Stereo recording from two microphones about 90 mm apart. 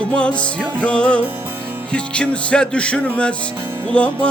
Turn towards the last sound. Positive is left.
turn(degrees=15)  # may be behind; listen again after turning